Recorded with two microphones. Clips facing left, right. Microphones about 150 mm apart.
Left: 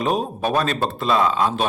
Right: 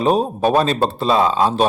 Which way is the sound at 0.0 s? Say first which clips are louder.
Right 6 dB; 30° right (ahead or behind).